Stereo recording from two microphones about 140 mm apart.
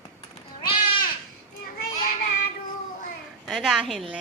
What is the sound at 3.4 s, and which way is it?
Speech, centre (ahead or behind).